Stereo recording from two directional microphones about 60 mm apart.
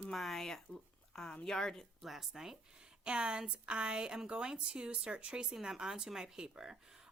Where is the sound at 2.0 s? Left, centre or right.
Centre.